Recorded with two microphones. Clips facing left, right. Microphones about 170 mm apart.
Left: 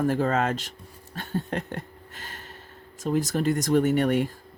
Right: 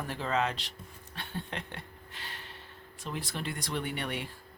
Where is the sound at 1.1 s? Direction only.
45° left (ahead or behind).